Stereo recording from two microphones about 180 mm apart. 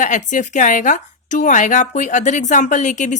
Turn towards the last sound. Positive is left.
turn(degrees=40)  # may be behind; listen again after turning